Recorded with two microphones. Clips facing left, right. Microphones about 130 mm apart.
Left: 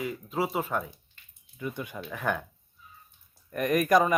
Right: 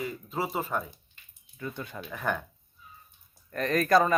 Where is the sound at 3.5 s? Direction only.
15° left (ahead or behind).